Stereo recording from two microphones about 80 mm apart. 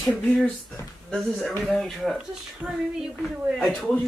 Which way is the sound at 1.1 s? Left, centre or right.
Centre.